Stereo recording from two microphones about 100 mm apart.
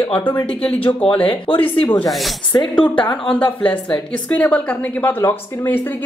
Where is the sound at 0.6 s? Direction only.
70° left (ahead or behind).